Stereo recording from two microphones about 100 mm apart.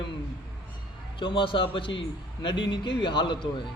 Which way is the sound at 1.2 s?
55° left (ahead or behind).